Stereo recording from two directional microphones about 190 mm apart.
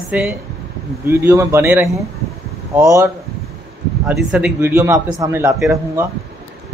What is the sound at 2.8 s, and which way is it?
Speech, 15° right (ahead or behind).